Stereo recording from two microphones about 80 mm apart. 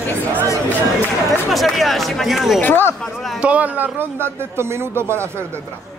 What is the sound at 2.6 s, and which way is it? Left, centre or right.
Speech, left.